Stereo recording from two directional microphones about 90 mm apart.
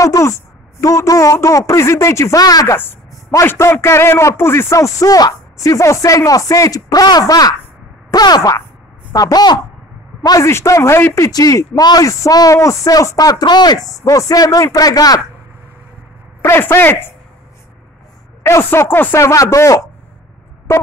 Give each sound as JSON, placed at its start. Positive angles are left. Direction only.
{"t": 0.0, "sound": "speech", "side_deg": 35}
{"t": 2.7, "sound": "a man's voice", "side_deg": 25}
{"t": 10.4, "sound": "a man's voice", "side_deg": 35}
{"t": 11.1, "sound": "a man's voice", "side_deg": 40}
{"t": 16.4, "sound": "a man's voice", "side_deg": 25}
{"t": 18.4, "sound": "a man's voice", "side_deg": 30}